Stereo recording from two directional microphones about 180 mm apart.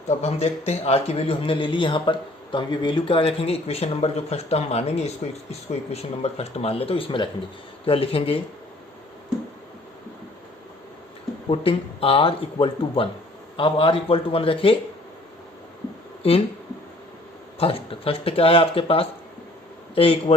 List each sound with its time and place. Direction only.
0.1 s a man's voice: 35° left (ahead or behind)
11.4 s a man's voice: 30° left (ahead or behind)
17.6 s a man's voice: 30° left (ahead or behind)